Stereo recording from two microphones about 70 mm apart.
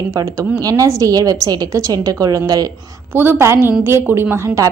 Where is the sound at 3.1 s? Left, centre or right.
Right.